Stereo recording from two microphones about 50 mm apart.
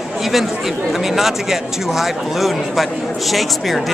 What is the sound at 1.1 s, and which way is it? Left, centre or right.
Speech, centre.